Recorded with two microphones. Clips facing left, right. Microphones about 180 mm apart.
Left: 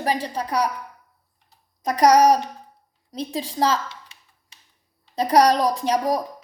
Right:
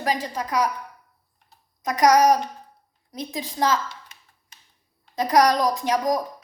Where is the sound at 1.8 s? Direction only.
30° left (ahead or behind).